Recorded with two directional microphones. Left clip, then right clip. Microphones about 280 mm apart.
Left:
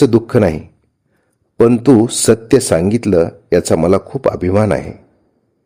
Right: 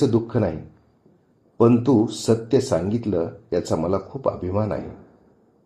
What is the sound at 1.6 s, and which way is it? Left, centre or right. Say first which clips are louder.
Speech: left 7 dB; left.